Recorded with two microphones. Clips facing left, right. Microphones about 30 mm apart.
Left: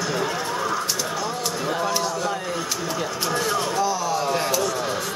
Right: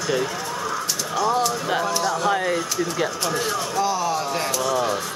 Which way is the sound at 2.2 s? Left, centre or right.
Right.